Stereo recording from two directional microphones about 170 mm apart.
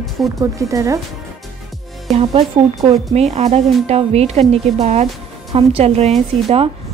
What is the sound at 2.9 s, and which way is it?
A woman's voice, 40° right (ahead or behind).